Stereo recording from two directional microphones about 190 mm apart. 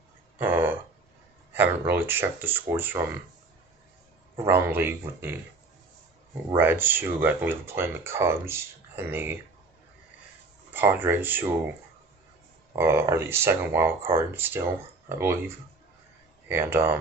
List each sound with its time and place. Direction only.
0.4 s a sound: 10° right (ahead or behind)
1.5 s speech: 10° right (ahead or behind)
4.5 s speech: 10° right (ahead or behind)
6.5 s speech: 10° right (ahead or behind)
10.7 s speech: 10° right (ahead or behind)
12.7 s speech: 15° right (ahead or behind)